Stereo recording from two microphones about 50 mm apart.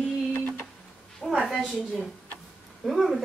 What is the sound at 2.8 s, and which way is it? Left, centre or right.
Speech, centre.